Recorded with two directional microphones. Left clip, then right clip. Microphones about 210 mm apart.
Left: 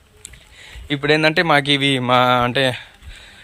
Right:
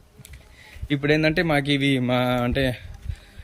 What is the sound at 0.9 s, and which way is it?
Speech, 10° right (ahead or behind).